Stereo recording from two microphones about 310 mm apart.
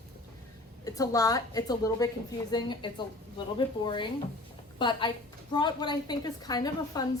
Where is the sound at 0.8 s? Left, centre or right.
Centre.